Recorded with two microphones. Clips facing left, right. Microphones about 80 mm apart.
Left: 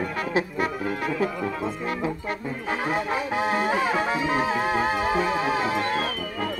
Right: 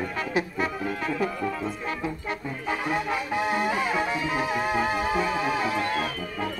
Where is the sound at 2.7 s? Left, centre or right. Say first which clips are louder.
Left 1 dB; left.